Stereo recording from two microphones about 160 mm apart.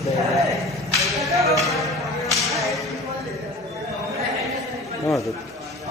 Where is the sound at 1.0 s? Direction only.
Centre (ahead or behind).